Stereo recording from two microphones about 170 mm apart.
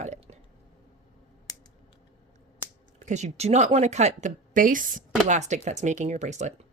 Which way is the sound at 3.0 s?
40° right (ahead or behind).